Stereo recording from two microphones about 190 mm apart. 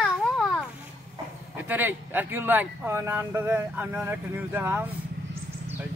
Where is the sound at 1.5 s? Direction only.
10° right (ahead or behind).